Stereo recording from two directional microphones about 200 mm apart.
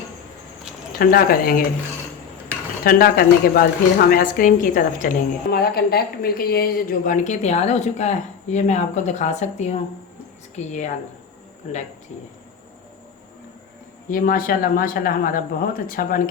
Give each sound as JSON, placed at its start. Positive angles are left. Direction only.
{"t": 0.9, "sound": "a woman's voice", "side_deg": 45}
{"t": 2.8, "sound": "a woman's voice", "side_deg": 45}
{"t": 14.1, "sound": "a woman's voice", "side_deg": 45}